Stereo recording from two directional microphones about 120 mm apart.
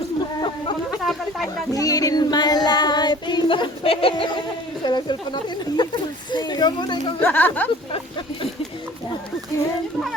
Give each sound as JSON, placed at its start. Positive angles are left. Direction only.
{"t": 0.9, "sound": "a sound", "side_deg": 0}
{"t": 1.7, "sound": "child singing", "side_deg": 30}
{"t": 4.9, "sound": "speech", "side_deg": 40}
{"t": 7.2, "sound": "speech", "side_deg": 15}